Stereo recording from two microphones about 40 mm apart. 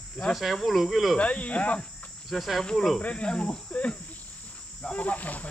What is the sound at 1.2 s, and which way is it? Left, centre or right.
Cricket, left.